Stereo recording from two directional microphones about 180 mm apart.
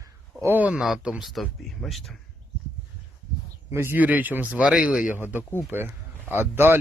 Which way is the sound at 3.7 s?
15° right (ahead or behind).